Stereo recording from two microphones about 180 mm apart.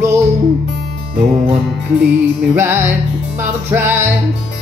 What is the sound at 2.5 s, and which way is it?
Music, 10° right (ahead or behind).